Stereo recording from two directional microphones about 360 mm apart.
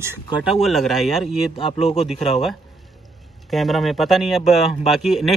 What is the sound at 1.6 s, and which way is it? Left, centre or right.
Speech, centre.